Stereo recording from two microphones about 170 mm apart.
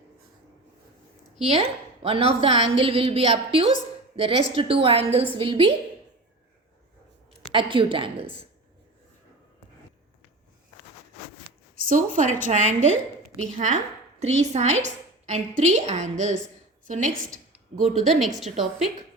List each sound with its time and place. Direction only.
1.5 s a woman's voice: 35° right (ahead or behind)
7.5 s a woman's voice: 30° right (ahead or behind)
11.9 s a woman's voice: 50° right (ahead or behind)
17.9 s a woman's voice: centre (ahead or behind)